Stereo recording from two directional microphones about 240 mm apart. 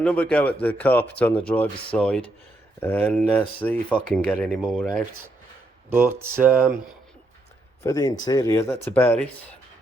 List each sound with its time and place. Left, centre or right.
0.0 s speech: centre
5.9 s speech: centre
7.9 s speech: centre